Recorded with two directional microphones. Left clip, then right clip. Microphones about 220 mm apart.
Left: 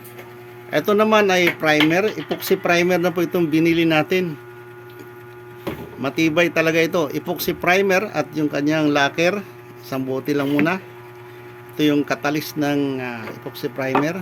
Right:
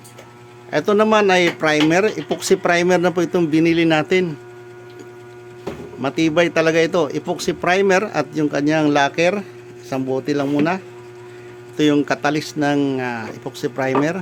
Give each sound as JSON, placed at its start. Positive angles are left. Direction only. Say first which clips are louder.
{"t": 0.7, "sound": "speech", "louder": "right 1 dB", "side_deg": -5}
{"t": 6.0, "sound": "speech", "louder": "right 1 dB", "side_deg": -10}